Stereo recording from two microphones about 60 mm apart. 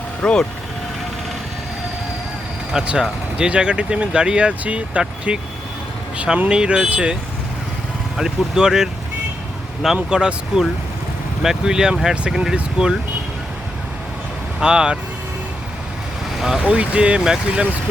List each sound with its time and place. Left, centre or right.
0.2 s speech: centre
3.0 s speech: centre
14.6 s speech: centre
16.6 s speech: right